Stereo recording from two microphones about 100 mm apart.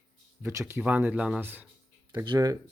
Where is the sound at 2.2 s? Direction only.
45° right (ahead or behind).